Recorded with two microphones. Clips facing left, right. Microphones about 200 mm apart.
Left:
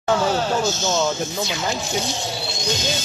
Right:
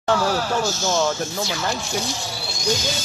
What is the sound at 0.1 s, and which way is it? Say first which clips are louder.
Speech: left 1 dB; 20° left (ahead or behind).